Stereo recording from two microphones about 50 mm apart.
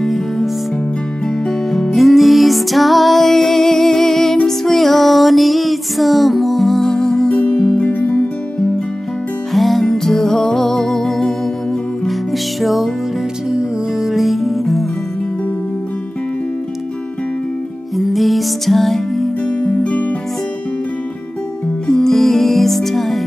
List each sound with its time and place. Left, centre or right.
0.0 s music: centre
7.4 s music: left
9.5 s music: centre
17.9 s music: centre
19.4 s music: left
21.8 s music: centre